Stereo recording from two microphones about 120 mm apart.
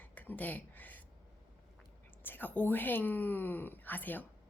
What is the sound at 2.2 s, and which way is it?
Speech, 15° left (ahead or behind).